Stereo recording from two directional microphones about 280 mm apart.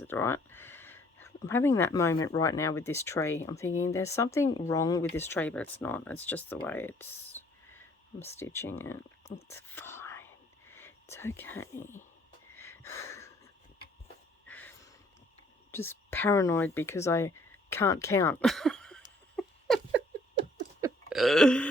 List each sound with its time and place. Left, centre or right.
0.0 s speech: centre
9.7 s whispering: centre
12.5 s a sound: centre
14.4 s a sound: centre
15.7 s speech: centre
19.4 s patter: centre
20.8 s burping: centre